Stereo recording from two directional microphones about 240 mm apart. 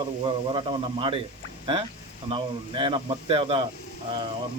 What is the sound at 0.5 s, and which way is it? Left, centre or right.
Speech, right.